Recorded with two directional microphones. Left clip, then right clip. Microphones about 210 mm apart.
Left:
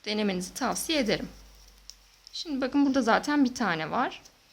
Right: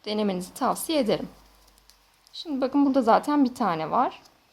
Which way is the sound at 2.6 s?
Centre (ahead or behind).